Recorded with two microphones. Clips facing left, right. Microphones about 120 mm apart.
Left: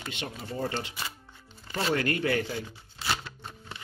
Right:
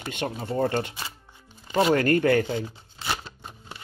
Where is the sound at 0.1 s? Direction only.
50° right (ahead or behind).